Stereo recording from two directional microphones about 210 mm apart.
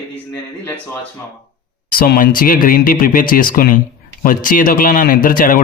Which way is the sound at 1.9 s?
45° left (ahead or behind).